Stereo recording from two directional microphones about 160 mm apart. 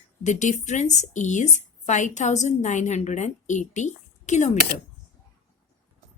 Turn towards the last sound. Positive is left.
turn(degrees=45)  # may be behind; listen again after turning